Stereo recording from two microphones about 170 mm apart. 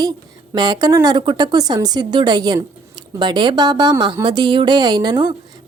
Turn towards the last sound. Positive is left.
turn(degrees=-25)  # may be behind; listen again after turning